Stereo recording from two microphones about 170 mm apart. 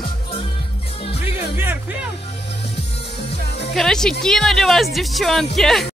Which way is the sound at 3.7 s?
5° left (ahead or behind).